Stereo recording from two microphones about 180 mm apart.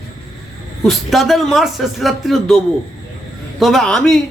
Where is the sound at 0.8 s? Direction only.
Centre (ahead or behind).